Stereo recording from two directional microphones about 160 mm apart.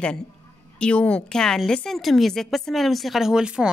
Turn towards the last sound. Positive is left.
turn(degrees=-5)  # may be behind; listen again after turning